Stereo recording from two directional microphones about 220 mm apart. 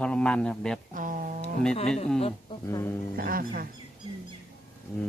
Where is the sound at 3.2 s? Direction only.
40° right (ahead or behind).